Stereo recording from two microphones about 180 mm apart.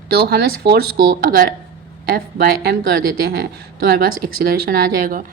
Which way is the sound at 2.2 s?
55° right (ahead or behind).